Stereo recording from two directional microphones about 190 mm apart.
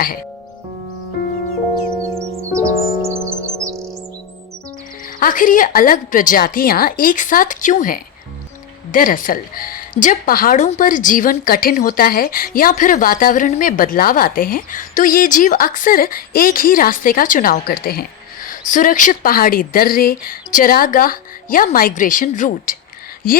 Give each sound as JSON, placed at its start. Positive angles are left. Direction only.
{"t": 2.5, "sound": "music", "side_deg": -15}
{"t": 5.2, "sound": "speech", "side_deg": 45}